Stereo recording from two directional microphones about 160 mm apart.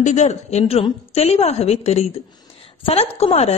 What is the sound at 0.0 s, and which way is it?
A man's voice, 45° left (ahead or behind).